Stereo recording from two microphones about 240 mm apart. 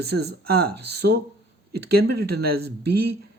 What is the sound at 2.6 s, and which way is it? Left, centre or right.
Speech, right.